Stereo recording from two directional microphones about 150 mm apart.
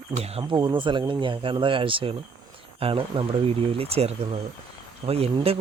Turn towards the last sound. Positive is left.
turn(degrees=-40)  # may be behind; listen again after turning